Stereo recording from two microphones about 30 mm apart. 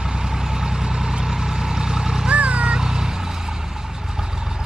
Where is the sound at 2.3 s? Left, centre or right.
Right.